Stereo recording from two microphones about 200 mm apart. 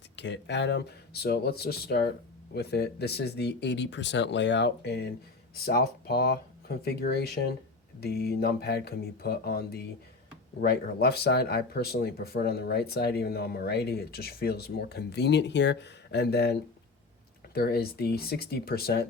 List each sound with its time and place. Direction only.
0.2 s speech: 60° left (ahead or behind)